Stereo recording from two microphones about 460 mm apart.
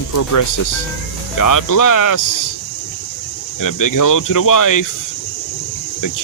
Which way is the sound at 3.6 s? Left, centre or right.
Left.